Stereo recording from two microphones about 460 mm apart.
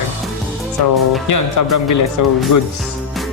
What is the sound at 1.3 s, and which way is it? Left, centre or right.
Speech, left.